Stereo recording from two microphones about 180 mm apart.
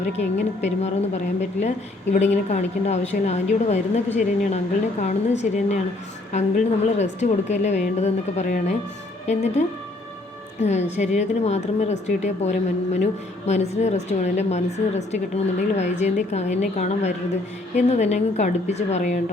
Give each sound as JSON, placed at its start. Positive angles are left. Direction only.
{"t": 0.0, "sound": "a woman's voice", "side_deg": 40}